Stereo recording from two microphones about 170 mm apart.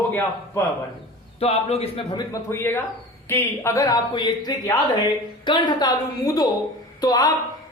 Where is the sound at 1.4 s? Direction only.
35° left (ahead or behind).